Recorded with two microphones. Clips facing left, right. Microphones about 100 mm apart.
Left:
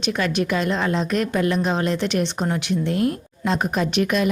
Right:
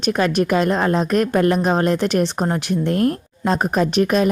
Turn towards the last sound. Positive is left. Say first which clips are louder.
# right 4 dB
turn(degrees=-40)  # may be behind; listen again after turning